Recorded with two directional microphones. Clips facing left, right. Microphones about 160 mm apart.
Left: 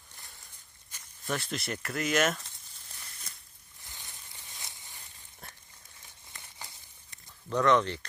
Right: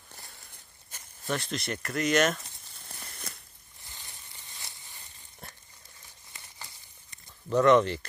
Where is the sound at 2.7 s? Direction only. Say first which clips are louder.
Right 8 dB; 60° right (ahead or behind).